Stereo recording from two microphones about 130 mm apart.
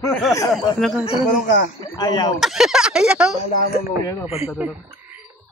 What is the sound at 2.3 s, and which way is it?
Speech, centre (ahead or behind).